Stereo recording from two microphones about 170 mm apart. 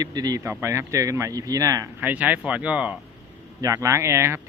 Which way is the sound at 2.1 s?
10° right (ahead or behind).